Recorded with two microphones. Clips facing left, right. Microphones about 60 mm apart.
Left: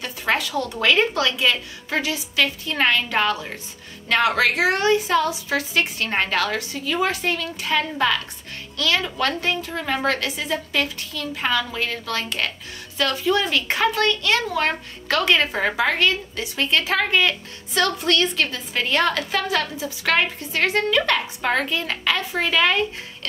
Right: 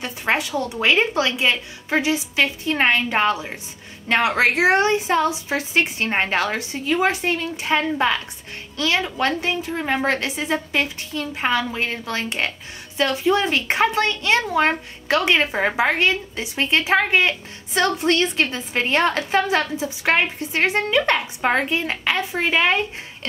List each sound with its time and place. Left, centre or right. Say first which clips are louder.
0.0 s a woman's voice: right 1 dB; right